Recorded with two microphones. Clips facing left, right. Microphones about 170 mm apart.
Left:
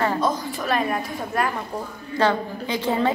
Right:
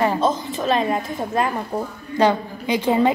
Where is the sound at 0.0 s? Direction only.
20° right (ahead or behind).